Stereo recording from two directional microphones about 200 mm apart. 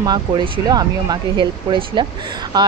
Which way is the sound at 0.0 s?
20° right (ahead or behind).